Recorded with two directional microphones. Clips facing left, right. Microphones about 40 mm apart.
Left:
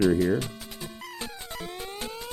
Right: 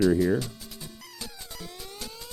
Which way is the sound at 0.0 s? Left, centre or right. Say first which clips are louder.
Even; left.